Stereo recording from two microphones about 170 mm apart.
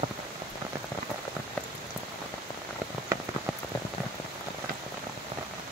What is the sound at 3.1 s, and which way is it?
Rain on surface, 15° right (ahead or behind).